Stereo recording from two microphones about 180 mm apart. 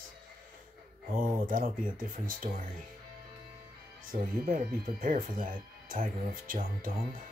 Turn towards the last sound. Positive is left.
turn(degrees=-50)  # may be behind; listen again after turning